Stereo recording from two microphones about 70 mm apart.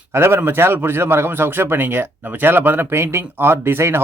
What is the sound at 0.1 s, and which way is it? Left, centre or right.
A man's voice, right.